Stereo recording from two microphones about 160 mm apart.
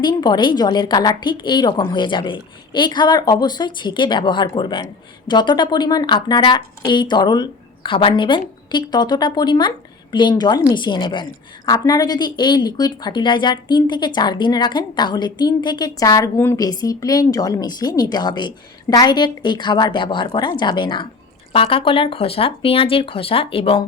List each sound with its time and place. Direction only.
0.0 s a woman's voice: 25° left (ahead or behind)